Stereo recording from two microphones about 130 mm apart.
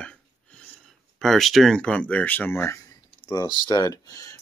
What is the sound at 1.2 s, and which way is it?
Speech, centre (ahead or behind).